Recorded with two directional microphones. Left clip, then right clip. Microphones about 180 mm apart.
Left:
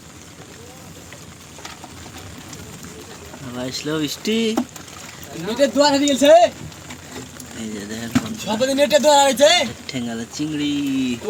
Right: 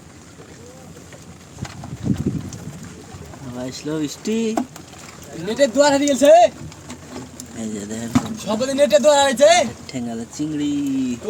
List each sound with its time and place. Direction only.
3.5 s speech: 5° right (ahead or behind); by 6.5 s 25° right (ahead or behind)
7.8 s speech: 15° right (ahead or behind)